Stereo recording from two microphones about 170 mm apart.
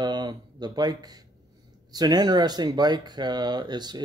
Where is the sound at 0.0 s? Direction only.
25° right (ahead or behind).